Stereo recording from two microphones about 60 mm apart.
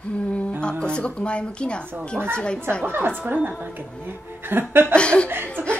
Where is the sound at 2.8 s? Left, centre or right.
Right.